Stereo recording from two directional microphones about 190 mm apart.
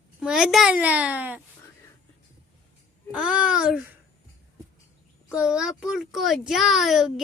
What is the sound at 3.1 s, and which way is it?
Child singing, 5° right (ahead or behind).